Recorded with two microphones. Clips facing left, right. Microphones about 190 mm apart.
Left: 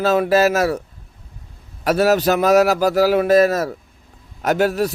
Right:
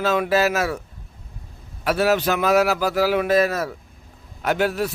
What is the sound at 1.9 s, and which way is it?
A man's voice, 40° left (ahead or behind).